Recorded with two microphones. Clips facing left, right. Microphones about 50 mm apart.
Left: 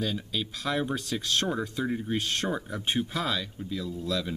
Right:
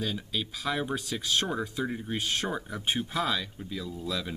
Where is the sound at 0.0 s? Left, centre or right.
Centre.